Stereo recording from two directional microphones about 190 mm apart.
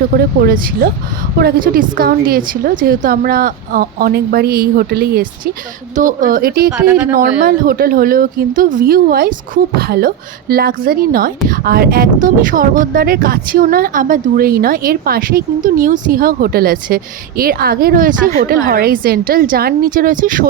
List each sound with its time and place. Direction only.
0.1 s speech: 50° right (ahead or behind)
6.7 s speech: 5° right (ahead or behind)
7.1 s speech: 50° right (ahead or behind)